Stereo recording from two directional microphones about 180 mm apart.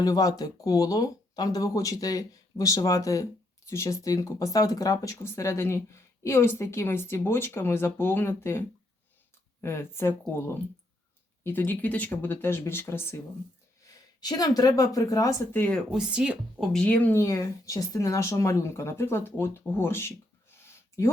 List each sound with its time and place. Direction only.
0.0 s speech: 20° left (ahead or behind)
14.2 s speech: 20° left (ahead or behind)
15.9 s speech: 5° right (ahead or behind); by 20.1 s 15° left (ahead or behind)
20.6 s a sound: 15° left (ahead or behind)